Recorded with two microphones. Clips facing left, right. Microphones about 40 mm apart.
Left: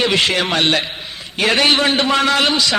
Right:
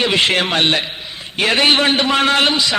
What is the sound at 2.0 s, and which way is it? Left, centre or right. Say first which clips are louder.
Speech: even; right.